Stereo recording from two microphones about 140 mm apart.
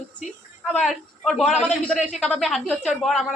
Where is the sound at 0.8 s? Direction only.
Centre (ahead or behind).